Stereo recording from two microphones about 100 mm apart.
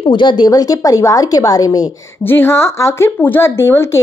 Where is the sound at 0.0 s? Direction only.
50° left (ahead or behind).